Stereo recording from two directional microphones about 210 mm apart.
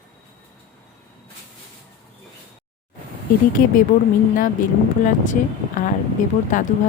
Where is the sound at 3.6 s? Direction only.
40° left (ahead or behind).